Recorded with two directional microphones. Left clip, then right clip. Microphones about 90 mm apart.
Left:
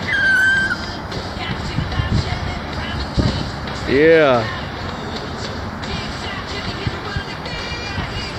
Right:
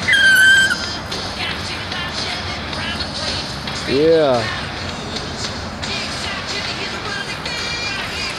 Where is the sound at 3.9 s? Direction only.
40° left (ahead or behind).